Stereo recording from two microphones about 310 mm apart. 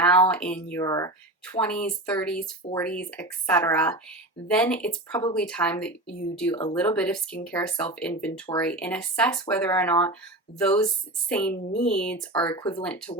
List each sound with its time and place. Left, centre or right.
0.0 s speech: centre
12.3 s speech: centre